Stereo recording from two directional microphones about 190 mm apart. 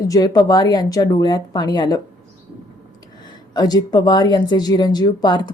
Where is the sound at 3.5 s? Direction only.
20° left (ahead or behind).